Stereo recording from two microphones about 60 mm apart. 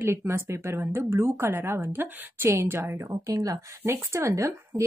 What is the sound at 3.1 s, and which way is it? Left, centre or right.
Speech, right.